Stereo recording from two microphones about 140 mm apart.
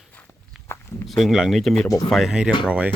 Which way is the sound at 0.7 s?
20° left (ahead or behind).